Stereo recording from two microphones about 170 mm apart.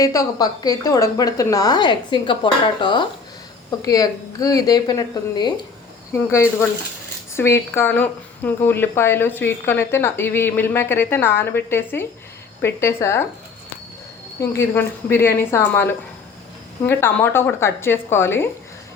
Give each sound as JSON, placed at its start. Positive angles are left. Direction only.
{"t": 0.0, "sound": "a woman's voice", "side_deg": 20}
{"t": 14.5, "sound": "speech", "side_deg": 15}